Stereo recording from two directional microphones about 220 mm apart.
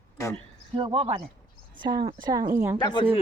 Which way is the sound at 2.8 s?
20° left (ahead or behind).